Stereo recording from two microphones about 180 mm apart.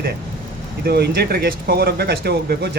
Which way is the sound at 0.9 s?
65° right (ahead or behind).